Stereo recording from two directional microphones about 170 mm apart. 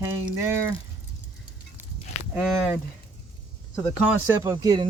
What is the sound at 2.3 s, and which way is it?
Speech, 5° right (ahead or behind).